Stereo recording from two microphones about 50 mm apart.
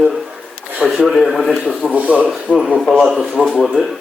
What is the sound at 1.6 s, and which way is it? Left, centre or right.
Speech, right.